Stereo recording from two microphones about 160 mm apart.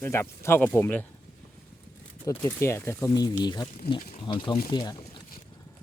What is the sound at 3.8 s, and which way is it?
Speech, 80° left.